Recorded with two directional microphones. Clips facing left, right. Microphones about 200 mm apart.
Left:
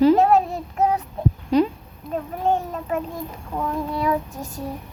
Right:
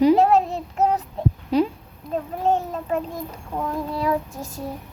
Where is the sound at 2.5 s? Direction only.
30° right (ahead or behind).